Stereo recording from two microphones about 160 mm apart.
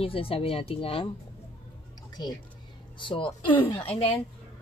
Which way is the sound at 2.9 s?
30° left (ahead or behind).